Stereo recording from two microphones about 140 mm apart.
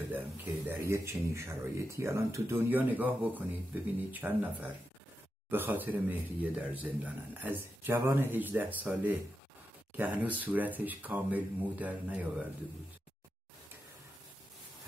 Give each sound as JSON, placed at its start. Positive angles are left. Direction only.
{"t": 0.1, "sound": "speech", "side_deg": -15}